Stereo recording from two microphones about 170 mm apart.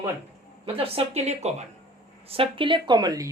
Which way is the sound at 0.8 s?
35° right (ahead or behind).